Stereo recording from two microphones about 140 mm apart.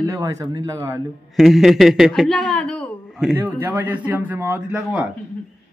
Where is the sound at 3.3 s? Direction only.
15° right (ahead or behind).